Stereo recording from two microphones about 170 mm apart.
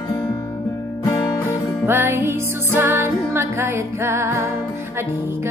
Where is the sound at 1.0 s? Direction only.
20° left (ahead or behind).